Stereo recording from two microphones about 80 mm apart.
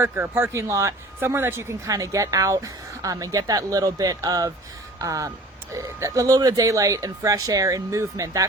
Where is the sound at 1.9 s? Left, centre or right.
Right.